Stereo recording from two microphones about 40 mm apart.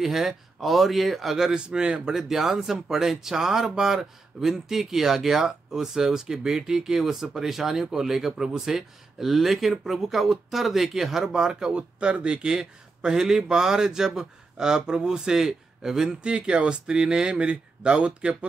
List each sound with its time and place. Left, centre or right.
0.0 s speech: centre
1.5 s speech: right
2.2 s speech: centre
16.2 s speech: right